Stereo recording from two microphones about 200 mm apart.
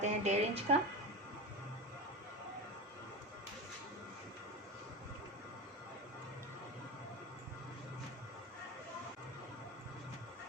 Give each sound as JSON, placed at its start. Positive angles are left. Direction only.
{"t": 0.0, "sound": "speech", "side_deg": -35}